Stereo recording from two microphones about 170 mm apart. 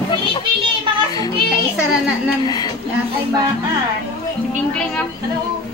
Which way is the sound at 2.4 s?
20° left (ahead or behind).